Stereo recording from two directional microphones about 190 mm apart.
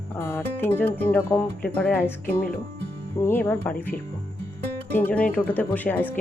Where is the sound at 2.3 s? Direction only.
50° left (ahead or behind).